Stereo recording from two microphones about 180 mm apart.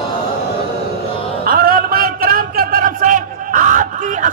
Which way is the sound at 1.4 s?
55° right (ahead or behind).